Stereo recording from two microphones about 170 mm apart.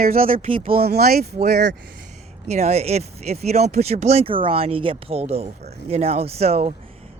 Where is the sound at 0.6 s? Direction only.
60° right (ahead or behind).